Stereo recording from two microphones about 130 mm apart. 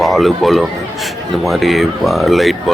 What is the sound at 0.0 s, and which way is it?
Speech, centre (ahead or behind).